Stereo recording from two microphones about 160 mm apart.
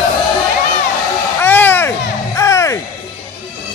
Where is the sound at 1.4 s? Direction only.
10° left (ahead or behind).